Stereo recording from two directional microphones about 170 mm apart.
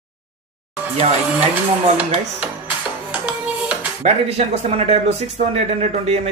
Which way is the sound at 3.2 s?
5° right (ahead or behind).